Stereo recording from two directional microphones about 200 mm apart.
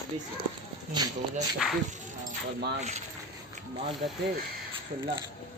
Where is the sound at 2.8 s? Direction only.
35° right (ahead or behind).